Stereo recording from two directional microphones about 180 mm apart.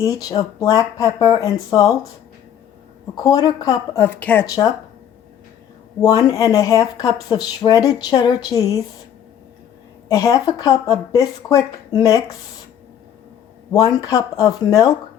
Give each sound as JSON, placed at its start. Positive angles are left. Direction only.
{"t": 0.0, "sound": "speech", "side_deg": 20}
{"t": 3.2, "sound": "speech", "side_deg": 20}
{"t": 4.4, "sound": "speech", "side_deg": 20}
{"t": 6.0, "sound": "speech", "side_deg": 20}
{"t": 10.1, "sound": "speech", "side_deg": 20}
{"t": 13.7, "sound": "speech", "side_deg": 20}